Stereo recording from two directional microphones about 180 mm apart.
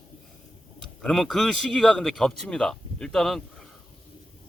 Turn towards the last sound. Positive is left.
turn(degrees=0)  # may be behind; listen again after turning